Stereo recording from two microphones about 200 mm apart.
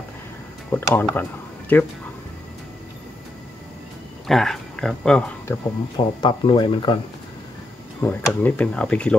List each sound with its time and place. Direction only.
0.7 s speech: 10° left (ahead or behind)
4.3 s speech: centre (ahead or behind)
5.9 s speech: 20° left (ahead or behind)
8.0 s speech: 10° left (ahead or behind)